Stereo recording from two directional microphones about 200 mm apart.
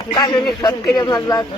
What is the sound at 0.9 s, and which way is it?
Speech, 20° left (ahead or behind).